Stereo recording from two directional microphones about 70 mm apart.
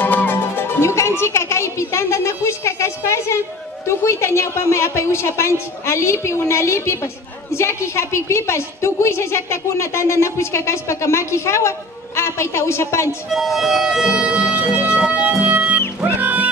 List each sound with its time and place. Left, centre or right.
0.0 s music: left
3.8 s a woman's voice: left
13.3 s speech: centre
15.4 s music: centre